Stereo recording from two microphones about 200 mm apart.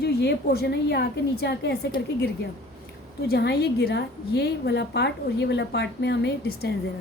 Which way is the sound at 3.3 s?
55° left (ahead or behind).